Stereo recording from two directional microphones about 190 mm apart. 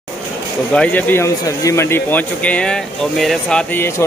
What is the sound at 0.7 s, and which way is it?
Speech, 10° left (ahead or behind).